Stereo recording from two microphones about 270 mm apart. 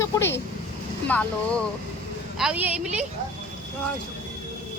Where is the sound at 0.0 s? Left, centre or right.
Centre.